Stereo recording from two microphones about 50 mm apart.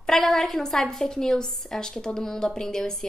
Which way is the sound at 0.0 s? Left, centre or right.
Centre.